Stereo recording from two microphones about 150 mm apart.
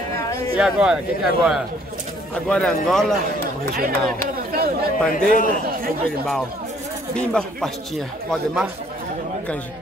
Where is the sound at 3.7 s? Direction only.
75° right (ahead or behind).